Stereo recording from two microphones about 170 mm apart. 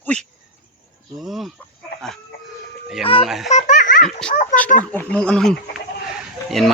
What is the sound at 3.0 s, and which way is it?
Telephone dialing, 35° left (ahead or behind).